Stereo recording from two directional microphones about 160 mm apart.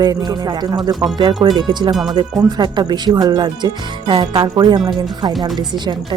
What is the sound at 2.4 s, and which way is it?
Speech, 25° right (ahead or behind).